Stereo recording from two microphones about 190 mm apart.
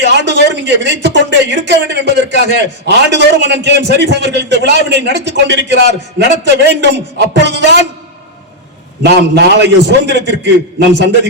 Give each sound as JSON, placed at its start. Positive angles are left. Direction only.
{"t": 0.0, "sound": "speech", "side_deg": -65}
{"t": 9.0, "sound": "speech", "side_deg": -60}